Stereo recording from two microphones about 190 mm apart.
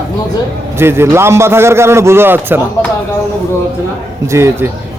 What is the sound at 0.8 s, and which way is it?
A man's voice, 10° right (ahead or behind).